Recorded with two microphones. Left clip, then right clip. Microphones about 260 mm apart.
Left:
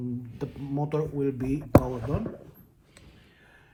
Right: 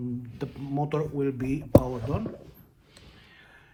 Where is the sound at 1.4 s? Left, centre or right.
Centre.